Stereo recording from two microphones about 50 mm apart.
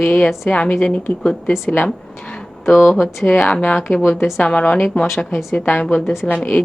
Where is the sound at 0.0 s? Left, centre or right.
Left.